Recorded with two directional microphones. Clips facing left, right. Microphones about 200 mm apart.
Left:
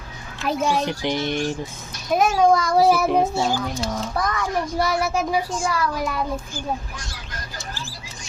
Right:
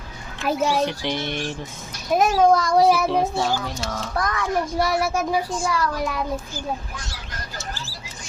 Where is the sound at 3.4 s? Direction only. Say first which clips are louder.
Left 1 dB; 20° left (ahead or behind).